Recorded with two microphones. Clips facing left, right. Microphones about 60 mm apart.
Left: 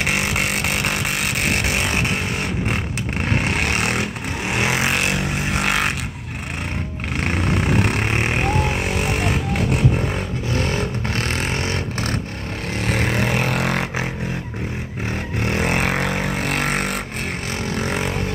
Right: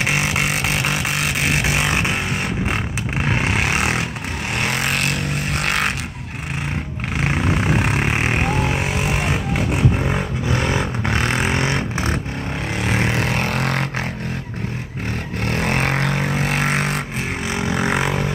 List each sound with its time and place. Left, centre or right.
0.0 s vehicle: centre
3.2 s vehicle: centre
4.6 s vehicle: centre
7.2 s vehicle: centre
10.1 s vehicle: right
12.8 s vehicle: centre
15.4 s vehicle: centre
17.5 s vehicle: right